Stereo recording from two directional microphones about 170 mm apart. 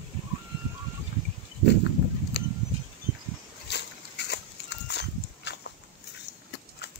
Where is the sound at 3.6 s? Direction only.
80° left.